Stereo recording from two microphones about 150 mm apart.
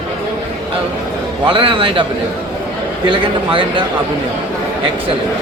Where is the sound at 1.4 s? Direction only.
35° right (ahead or behind).